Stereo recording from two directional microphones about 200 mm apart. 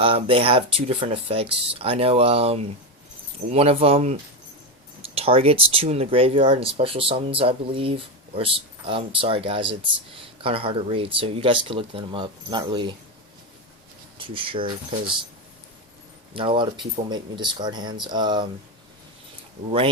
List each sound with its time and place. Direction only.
0.0 s speech: 30° right (ahead or behind)
14.2 s speech: 25° right (ahead or behind)
16.3 s speech: 25° right (ahead or behind)